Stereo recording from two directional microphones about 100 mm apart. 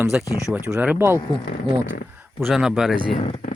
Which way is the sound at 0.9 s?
25° right (ahead or behind).